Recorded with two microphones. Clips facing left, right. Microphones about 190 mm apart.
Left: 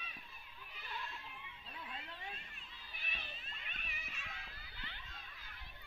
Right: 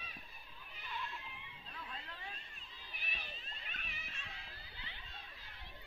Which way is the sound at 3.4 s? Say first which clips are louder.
Right 1 dB; 35° right (ahead or behind).